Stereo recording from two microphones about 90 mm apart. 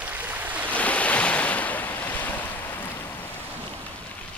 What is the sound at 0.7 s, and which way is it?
Waves, 15° left (ahead or behind).